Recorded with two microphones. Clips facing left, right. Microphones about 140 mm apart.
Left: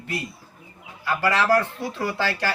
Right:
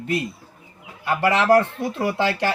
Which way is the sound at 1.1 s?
20° right (ahead or behind).